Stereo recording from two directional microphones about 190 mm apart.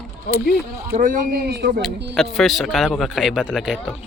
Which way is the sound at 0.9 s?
45° right (ahead or behind).